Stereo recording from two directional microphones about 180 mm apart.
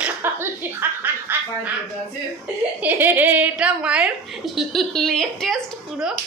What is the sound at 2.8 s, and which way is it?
A woman's voice, 10° right (ahead or behind).